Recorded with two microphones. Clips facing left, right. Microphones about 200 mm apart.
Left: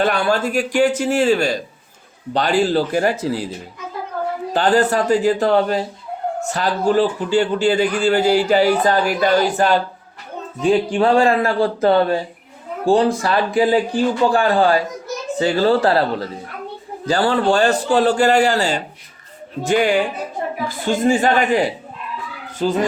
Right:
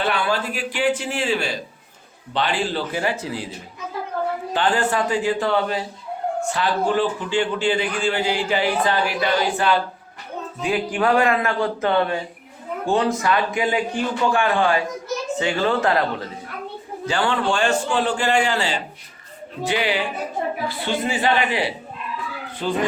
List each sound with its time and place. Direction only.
0.0 s a man's voice: 45° left (ahead or behind)
4.5 s a man's voice: 40° left (ahead or behind)
10.6 s a man's voice: 30° left (ahead or behind)